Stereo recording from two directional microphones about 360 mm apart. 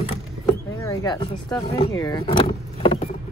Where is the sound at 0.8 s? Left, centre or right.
Centre.